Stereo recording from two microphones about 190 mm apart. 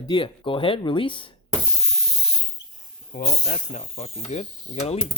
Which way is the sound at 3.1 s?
50° left (ahead or behind).